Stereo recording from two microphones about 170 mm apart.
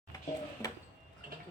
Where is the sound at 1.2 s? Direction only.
55° right (ahead or behind).